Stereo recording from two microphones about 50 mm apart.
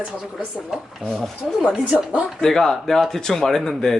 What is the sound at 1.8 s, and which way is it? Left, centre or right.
Speech, right.